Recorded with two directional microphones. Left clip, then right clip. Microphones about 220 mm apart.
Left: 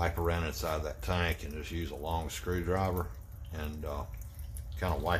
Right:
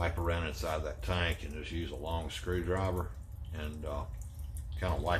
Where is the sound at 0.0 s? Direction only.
55° left (ahead or behind).